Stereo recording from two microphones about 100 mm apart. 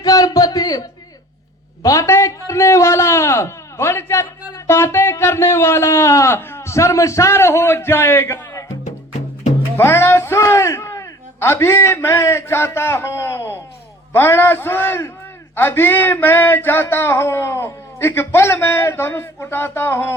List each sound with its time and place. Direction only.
0.0 s a sound: 40° left (ahead or behind)
1.8 s a man's voice: 35° left (ahead or behind)
9.7 s a man's voice: 25° left (ahead or behind)